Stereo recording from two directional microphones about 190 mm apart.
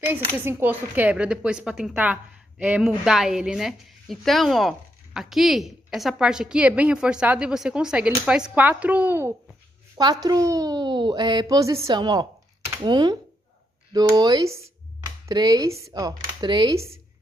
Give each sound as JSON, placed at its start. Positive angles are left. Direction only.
{"t": 0.4, "sound": "a woman's voice", "side_deg": -10}